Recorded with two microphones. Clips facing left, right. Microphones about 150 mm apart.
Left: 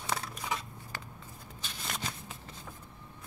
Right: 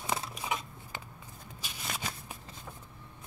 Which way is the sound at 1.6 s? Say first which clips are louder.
Even; 5° right (ahead or behind).